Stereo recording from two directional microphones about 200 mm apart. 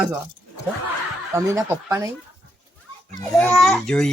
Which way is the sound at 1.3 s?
15° right (ahead or behind).